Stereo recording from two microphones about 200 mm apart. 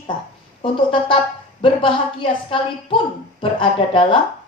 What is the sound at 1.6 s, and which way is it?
A woman's voice, 25° left (ahead or behind).